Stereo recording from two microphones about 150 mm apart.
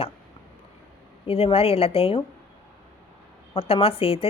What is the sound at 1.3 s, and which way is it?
Speech, 40° left (ahead or behind).